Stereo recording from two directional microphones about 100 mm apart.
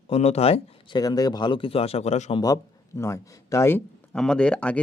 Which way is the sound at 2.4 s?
35° left (ahead or behind).